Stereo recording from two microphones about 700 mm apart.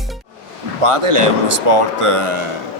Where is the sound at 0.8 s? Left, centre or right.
Right.